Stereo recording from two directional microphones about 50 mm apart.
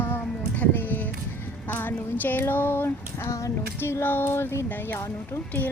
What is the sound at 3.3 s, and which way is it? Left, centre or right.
Child singing, left.